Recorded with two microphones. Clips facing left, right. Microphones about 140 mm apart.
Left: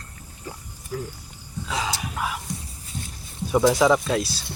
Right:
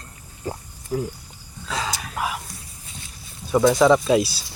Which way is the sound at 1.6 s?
15° left (ahead or behind).